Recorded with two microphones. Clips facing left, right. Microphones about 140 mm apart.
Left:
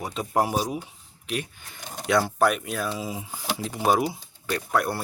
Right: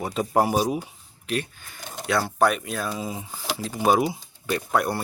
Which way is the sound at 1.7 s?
20° left (ahead or behind).